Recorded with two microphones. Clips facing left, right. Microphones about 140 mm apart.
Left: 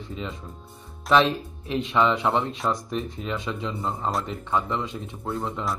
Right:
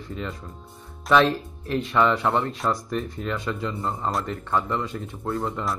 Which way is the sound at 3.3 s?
20° left (ahead or behind).